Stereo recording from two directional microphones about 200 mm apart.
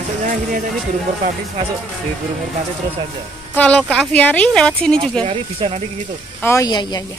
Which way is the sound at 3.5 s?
5° left (ahead or behind).